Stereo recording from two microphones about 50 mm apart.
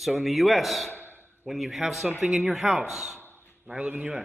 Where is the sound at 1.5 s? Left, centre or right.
Centre.